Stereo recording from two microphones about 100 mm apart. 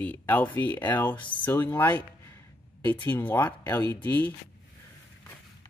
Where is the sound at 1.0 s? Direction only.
55° left (ahead or behind).